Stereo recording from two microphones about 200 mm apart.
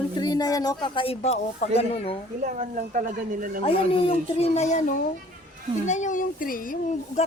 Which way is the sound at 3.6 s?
25° left (ahead or behind).